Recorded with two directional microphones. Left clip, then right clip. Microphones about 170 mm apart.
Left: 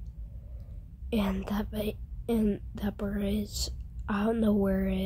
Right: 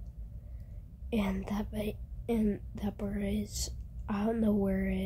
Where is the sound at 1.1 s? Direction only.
20° left (ahead or behind).